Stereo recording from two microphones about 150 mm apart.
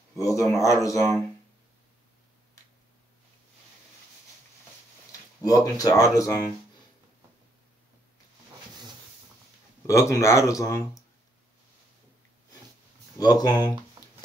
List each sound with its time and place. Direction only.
0.2 s speech: 20° left (ahead or behind)
5.4 s speech: 25° left (ahead or behind)
9.8 s speech: 20° left (ahead or behind)
13.2 s speech: 25° left (ahead or behind)